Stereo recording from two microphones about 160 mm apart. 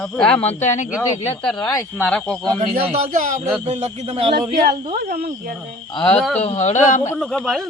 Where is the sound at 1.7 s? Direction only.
10° left (ahead or behind).